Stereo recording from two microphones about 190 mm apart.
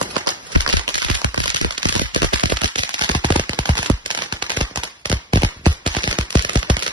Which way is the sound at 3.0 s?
25° right (ahead or behind).